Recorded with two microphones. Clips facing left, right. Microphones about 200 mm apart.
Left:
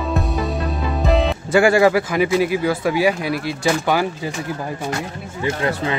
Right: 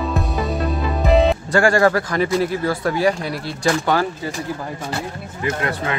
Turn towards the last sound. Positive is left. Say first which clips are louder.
# even
turn(degrees=10)  # may be behind; listen again after turning